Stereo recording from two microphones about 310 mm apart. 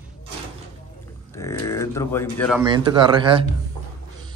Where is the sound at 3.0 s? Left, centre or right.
Centre.